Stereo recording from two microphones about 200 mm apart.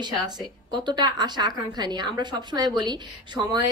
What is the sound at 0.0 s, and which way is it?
A woman's voice, 20° right (ahead or behind).